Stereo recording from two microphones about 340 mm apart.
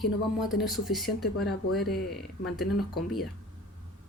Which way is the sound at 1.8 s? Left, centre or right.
Left.